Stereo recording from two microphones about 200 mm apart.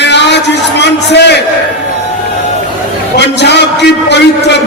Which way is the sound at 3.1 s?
60° left (ahead or behind).